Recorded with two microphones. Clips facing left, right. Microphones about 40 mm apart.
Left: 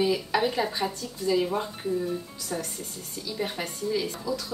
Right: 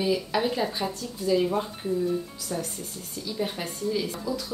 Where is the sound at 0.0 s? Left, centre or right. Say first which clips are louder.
Left 1 dB; centre.